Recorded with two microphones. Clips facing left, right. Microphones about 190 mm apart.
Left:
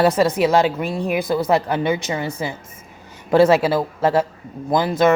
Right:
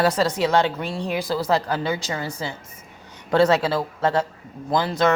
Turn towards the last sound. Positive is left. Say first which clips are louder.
# left 4 dB
turn(degrees=20)  # may be behind; listen again after turning